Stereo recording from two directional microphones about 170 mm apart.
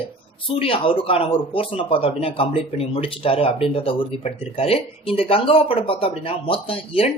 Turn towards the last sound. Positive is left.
turn(degrees=35)  # may be behind; listen again after turning